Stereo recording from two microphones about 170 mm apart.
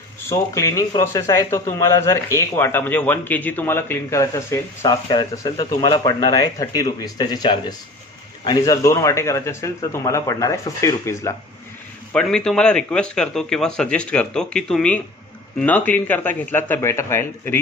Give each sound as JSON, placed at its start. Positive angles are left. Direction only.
{"t": 0.3, "sound": "a man's voice", "side_deg": 15}
{"t": 12.1, "sound": "a man's voice", "side_deg": 5}